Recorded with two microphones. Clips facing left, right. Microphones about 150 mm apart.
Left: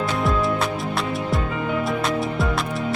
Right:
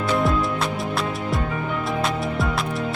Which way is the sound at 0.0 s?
Centre (ahead or behind).